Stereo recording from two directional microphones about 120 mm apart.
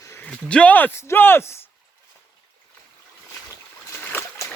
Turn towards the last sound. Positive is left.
turn(degrees=20)  # may be behind; listen again after turning